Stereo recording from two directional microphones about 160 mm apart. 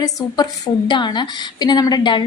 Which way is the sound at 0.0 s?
20° left (ahead or behind).